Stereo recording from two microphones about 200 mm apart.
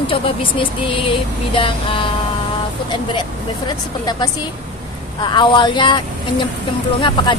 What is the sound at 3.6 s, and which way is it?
Speech, 20° left (ahead or behind).